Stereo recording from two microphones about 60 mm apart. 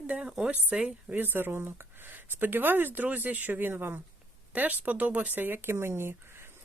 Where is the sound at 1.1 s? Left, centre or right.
Right.